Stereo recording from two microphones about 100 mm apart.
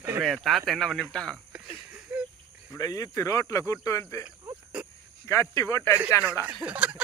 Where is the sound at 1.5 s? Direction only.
10° right (ahead or behind).